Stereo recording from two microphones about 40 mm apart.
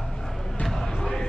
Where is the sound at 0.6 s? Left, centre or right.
Centre.